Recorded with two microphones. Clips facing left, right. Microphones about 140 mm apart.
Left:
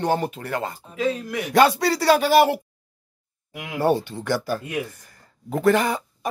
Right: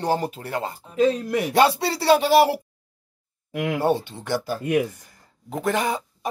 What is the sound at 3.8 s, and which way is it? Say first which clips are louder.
Speech: left 6 dB; 20° right (ahead or behind).